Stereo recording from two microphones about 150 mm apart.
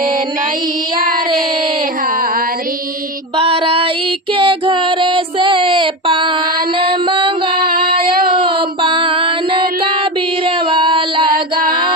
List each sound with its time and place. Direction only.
2.0 s a sound: 70° right (ahead or behind)
3.3 s music: 40° right (ahead or behind)
7.5 s child singing: 80° right
8.4 s music: 35° right (ahead or behind)